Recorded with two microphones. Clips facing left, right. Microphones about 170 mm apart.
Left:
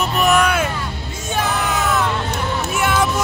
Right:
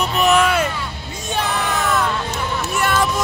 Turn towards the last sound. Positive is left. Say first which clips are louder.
# left 1 dB
turn(degrees=0)  # may be behind; listen again after turning